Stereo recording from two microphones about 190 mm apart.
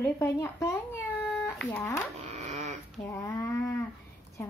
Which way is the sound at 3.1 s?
15° left (ahead or behind).